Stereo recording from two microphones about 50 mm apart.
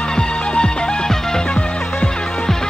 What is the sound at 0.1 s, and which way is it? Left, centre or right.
Music, centre.